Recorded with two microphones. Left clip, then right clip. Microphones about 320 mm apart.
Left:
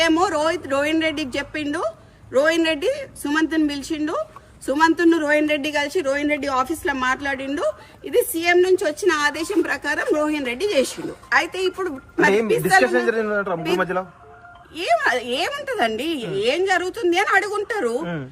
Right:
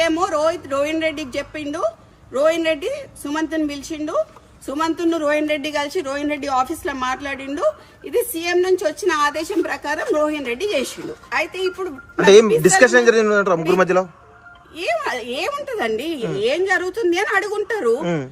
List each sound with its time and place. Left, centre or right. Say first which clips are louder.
0.1 s a man's voice: even; centre
12.1 s a man's voice: right 7 dB; right
12.5 s a man's voice: right 1 dB; centre
12.8 s a man's voice: right 7 dB; right
15.1 s a man's voice: left 1 dB; centre
18.0 s a man's voice: right 6 dB; right